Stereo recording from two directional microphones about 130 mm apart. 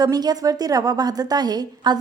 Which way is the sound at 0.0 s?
30° right (ahead or behind).